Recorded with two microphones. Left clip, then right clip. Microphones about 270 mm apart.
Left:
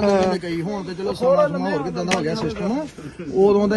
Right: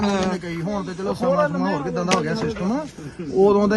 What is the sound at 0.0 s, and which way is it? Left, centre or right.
Speech, centre.